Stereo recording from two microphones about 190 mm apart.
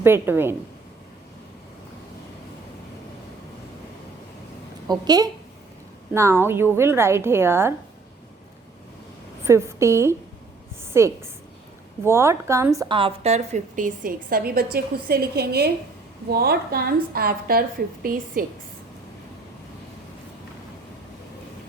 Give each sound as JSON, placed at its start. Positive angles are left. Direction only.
{"t": 0.0, "sound": "a woman's voice", "side_deg": -10}
{"t": 4.9, "sound": "a woman's voice", "side_deg": -20}
{"t": 9.4, "sound": "a woman's voice", "side_deg": -15}
{"t": 13.0, "sound": "a woman's voice", "side_deg": -30}